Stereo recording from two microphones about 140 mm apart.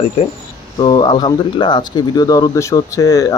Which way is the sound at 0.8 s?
30° left (ahead or behind).